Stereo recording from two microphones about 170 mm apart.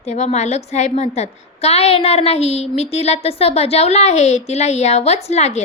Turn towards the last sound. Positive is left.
turn(degrees=40)  # may be behind; listen again after turning